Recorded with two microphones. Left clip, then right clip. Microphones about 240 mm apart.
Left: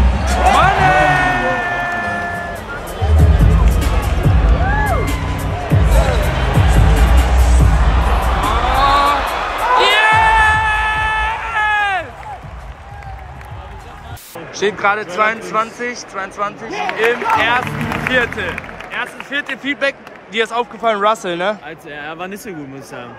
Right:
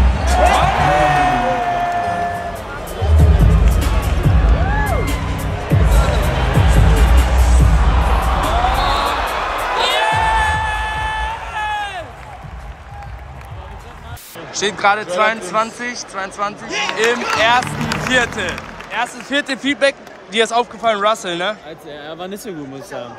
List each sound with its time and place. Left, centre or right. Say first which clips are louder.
0.0 s music: even; centre
14.5 s speech: even; centre
22.0 s speech: left 2 dB; centre